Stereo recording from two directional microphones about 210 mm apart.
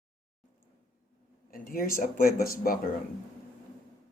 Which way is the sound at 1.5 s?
45° left (ahead or behind).